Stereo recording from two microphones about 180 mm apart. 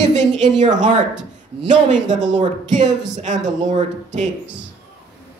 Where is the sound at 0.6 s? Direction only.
45° right (ahead or behind).